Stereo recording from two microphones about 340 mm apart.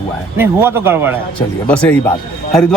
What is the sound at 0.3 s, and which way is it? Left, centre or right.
Speech, centre.